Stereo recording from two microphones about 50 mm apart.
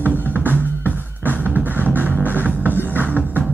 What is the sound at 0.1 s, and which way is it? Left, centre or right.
Music, left.